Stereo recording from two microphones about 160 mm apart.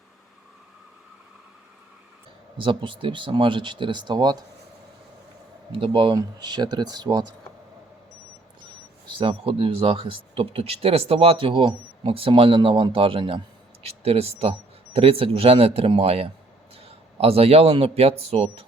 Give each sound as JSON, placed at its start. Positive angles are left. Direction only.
{"t": 2.6, "sound": "speech", "side_deg": -30}
{"t": 5.7, "sound": "speech", "side_deg": -30}
{"t": 9.1, "sound": "a man's voice", "side_deg": -35}